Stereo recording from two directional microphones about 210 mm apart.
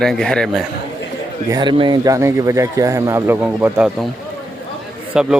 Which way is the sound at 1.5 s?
20° right (ahead or behind).